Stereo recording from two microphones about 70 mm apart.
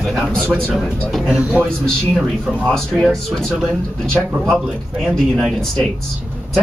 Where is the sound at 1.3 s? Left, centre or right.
Centre.